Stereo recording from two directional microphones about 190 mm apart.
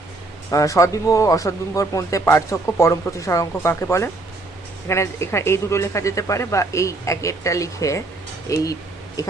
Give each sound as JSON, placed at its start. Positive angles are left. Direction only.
{"t": 0.5, "sound": "speech", "side_deg": 15}